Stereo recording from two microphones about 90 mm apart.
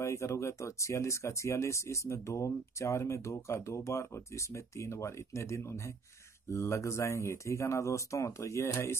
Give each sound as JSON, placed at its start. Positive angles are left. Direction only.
{"t": 0.0, "sound": "speech", "side_deg": 30}